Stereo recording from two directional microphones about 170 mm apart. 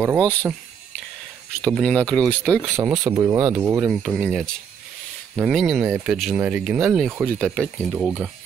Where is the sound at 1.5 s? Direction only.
Centre (ahead or behind).